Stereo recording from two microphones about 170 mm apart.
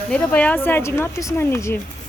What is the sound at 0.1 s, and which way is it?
Speech, 10° left (ahead or behind).